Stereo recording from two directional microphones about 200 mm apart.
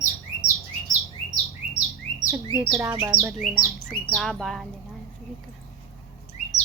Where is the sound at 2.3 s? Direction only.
5° right (ahead or behind).